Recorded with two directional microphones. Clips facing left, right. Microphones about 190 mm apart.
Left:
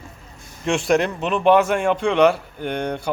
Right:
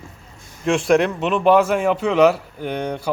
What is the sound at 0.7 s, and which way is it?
Speech, centre (ahead or behind).